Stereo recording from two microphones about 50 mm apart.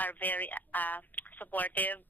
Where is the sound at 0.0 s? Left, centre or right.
Left.